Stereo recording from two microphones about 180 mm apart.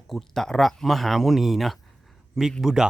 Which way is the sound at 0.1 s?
Centre (ahead or behind).